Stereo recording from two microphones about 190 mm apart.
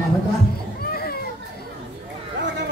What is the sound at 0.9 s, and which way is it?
Children playing, 55° left (ahead or behind).